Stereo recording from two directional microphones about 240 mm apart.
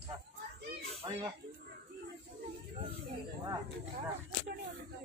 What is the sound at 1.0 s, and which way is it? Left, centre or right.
Chicken, centre.